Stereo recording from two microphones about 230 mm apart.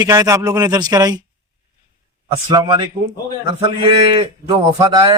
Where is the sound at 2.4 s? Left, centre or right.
Centre.